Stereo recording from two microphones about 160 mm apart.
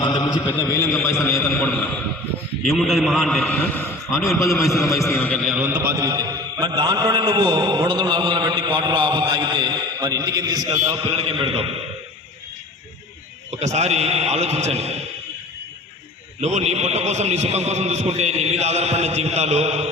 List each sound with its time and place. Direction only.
0.0 s mantra: 25° left (ahead or behind)
0.6 s a man's voice: 20° left (ahead or behind)
2.6 s a man's voice: centre (ahead or behind)
4.5 s a man's voice: 20° left (ahead or behind)
5.5 s a man's voice: 15° right (ahead or behind)
10.7 s a man's voice: 35° right (ahead or behind)
13.6 s a man's voice: 45° right (ahead or behind)
16.4 s a man's voice: 45° right (ahead or behind)